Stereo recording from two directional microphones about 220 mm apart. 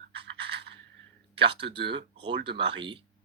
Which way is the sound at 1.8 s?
50° right (ahead or behind).